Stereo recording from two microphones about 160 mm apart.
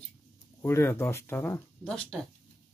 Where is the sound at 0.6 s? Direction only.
15° left (ahead or behind).